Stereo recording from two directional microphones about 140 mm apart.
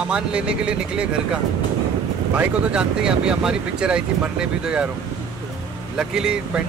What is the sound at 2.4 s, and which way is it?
Speech, 5° right (ahead or behind).